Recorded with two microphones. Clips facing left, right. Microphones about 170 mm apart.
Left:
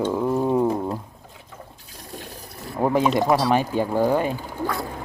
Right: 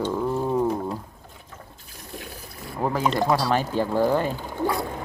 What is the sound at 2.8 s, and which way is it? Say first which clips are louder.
Speech: left 3 dB; 20° left (ahead or behind).